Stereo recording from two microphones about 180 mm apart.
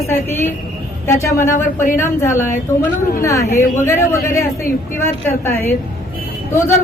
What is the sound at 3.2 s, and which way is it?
A woman's voice, 15° left (ahead or behind).